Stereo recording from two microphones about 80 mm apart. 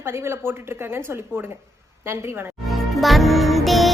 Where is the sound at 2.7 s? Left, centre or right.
Centre.